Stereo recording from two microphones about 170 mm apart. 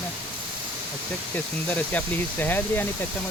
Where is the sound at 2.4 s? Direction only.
10° left (ahead or behind).